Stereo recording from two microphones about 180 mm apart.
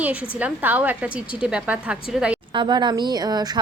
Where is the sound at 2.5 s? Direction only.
25° right (ahead or behind).